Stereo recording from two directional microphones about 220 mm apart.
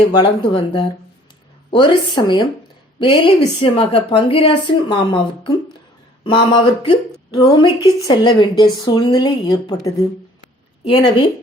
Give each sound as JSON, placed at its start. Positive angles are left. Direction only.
{"t": 0.1, "sound": "a woman's voice", "side_deg": 20}